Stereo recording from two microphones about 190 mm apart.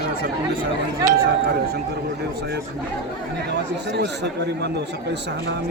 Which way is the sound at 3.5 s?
60° right (ahead or behind).